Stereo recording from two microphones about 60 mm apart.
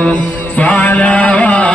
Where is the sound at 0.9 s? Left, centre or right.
Left.